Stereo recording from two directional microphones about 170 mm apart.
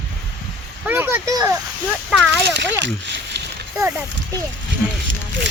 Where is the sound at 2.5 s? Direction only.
90° right.